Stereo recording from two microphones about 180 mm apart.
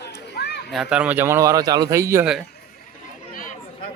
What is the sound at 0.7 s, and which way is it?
Speech, 5° right (ahead or behind).